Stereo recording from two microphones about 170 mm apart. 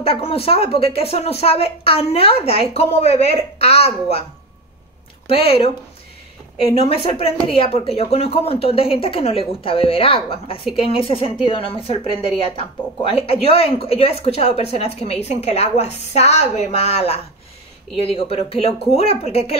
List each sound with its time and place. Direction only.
0.0 s speech: 35° left (ahead or behind)
5.2 s speech: 35° left (ahead or behind)
13.1 s speech: 35° left (ahead or behind)